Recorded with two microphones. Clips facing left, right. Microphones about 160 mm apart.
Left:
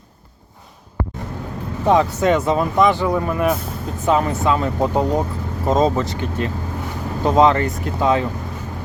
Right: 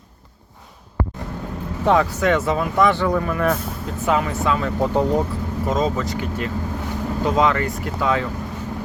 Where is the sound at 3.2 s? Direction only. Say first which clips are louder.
Left 2 dB; 25° left (ahead or behind).